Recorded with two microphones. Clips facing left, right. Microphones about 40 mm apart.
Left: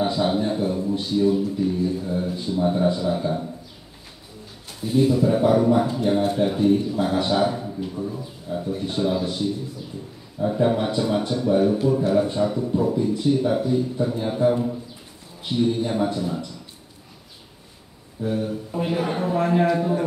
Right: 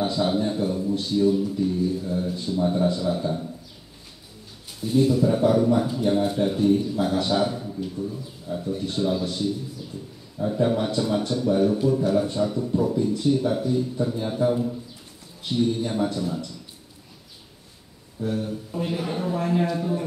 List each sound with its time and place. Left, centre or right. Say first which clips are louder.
0.0 s a man's voice: left 2 dB; centre
4.7 s a man's voice: left 1 dB; centre
18.2 s a man's voice: left 2 dB; centre